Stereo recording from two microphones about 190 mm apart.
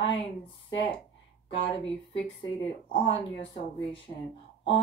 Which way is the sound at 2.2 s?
30° left (ahead or behind).